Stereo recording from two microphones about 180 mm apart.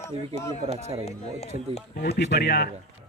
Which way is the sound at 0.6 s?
35° right (ahead or behind).